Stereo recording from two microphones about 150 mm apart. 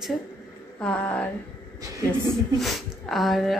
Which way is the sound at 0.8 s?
5° left (ahead or behind).